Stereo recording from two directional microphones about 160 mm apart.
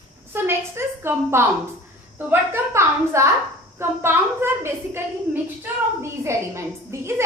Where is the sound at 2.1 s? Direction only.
15° right (ahead or behind).